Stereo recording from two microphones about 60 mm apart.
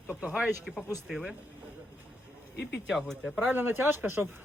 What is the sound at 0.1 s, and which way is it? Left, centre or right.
Speech, centre.